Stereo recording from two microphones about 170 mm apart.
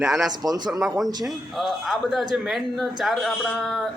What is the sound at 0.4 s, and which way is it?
Speech, 20° right (ahead or behind).